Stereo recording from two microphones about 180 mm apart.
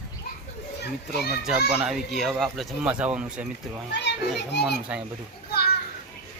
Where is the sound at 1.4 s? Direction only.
5° right (ahead or behind).